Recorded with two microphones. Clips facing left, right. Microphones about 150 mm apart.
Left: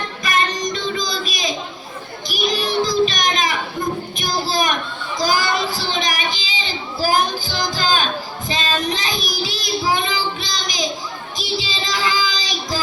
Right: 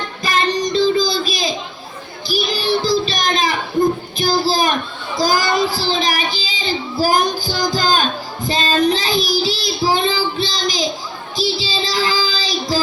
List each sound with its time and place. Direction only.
0.2 s child singing: 30° right (ahead or behind)
7.8 s a sound: 40° right (ahead or behind)
8.4 s child singing: 35° right (ahead or behind)